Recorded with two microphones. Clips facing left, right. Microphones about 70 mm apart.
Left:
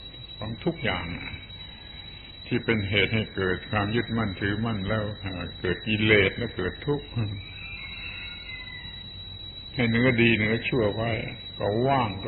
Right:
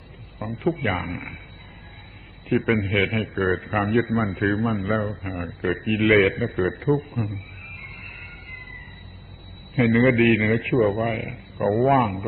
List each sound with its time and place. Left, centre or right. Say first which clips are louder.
0.3 s speech: right 5 dB; centre
1.0 s speech: right 4 dB; right
2.5 s a man's voice: right 4 dB; centre
9.7 s a man's voice: right 5 dB; centre